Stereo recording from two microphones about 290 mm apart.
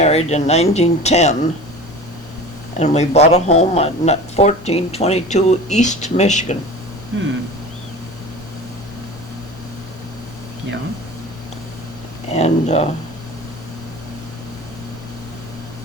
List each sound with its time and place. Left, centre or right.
0.0 s speech: left
2.7 s speech: left
7.1 s speech: right
12.3 s speech: left